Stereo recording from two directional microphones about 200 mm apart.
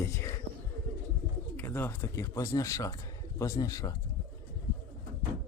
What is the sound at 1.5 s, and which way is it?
A man's voice, 10° left (ahead or behind).